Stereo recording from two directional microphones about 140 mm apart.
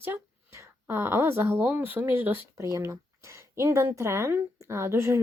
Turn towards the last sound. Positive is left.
turn(degrees=-20)  # may be behind; listen again after turning